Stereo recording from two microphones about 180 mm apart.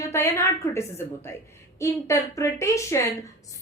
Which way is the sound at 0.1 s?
15° left (ahead or behind).